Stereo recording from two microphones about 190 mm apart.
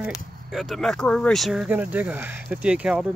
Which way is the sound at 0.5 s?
Centre (ahead or behind).